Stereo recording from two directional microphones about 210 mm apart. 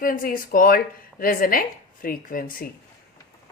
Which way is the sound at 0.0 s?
40° left (ahead or behind).